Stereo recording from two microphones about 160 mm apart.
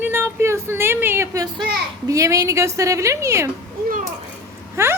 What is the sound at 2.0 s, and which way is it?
A woman's voice, 20° right (ahead or behind).